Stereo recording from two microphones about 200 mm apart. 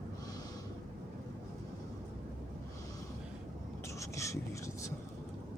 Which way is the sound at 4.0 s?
15° left (ahead or behind).